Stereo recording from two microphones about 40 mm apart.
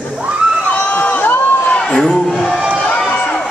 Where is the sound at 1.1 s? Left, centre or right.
Left.